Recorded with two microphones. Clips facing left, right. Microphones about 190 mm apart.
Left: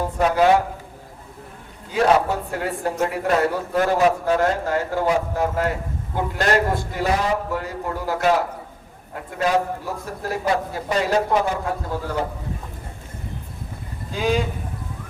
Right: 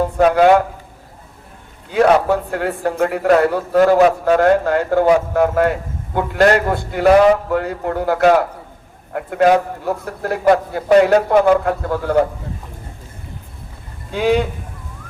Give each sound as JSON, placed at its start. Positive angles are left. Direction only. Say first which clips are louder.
{"t": 0.3, "sound": "a man's voice", "louder": "right 4 dB", "side_deg": -60}
{"t": 2.5, "sound": "a man's voice", "louder": "right 5 dB", "side_deg": -60}
{"t": 14.1, "sound": "a man's voice", "louder": "right 6 dB", "side_deg": -65}